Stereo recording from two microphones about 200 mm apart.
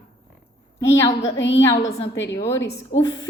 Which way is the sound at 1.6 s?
15° left (ahead or behind).